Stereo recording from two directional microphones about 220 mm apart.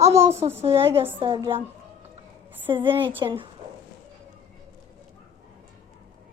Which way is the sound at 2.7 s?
20° right (ahead or behind).